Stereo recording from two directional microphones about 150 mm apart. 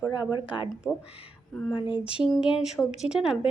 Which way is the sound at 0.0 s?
25° left (ahead or behind).